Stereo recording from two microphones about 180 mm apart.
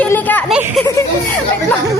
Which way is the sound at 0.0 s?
10° left (ahead or behind).